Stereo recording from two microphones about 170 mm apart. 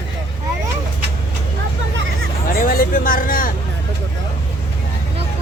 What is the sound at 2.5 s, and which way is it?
Speech, 55° left (ahead or behind).